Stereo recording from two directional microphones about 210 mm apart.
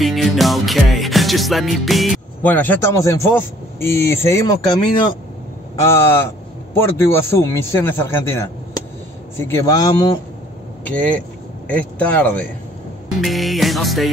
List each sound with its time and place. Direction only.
0.0 s music: centre (ahead or behind); by 5.1 s 20° left (ahead or behind)
5.9 s a man's voice: 10° left (ahead or behind)
10.9 s a man's voice: 5° left (ahead or behind)
13.2 s music: centre (ahead or behind)